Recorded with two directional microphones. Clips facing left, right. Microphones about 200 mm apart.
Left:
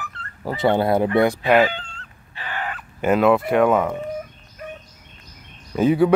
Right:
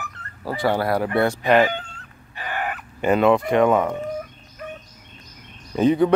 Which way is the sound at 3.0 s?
5° left (ahead or behind).